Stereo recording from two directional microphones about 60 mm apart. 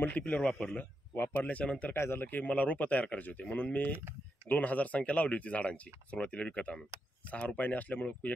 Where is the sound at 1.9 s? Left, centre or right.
Left.